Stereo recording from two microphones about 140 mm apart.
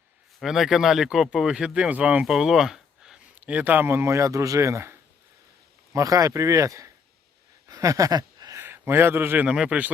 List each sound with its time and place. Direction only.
0.3 s a man's voice: centre (ahead or behind)